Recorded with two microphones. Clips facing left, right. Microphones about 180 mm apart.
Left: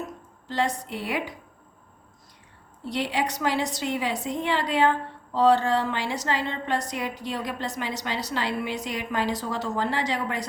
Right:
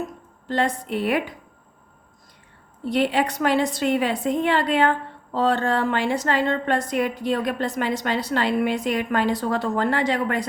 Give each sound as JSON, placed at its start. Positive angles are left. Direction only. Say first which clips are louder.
{"t": 0.4, "sound": "a woman's voice", "louder": "right 4 dB", "side_deg": -55}
{"t": 2.9, "sound": "a woman's voice", "louder": "right 6 dB", "side_deg": -55}